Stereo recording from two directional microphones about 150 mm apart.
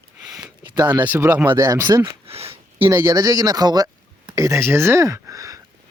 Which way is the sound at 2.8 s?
15° right (ahead or behind).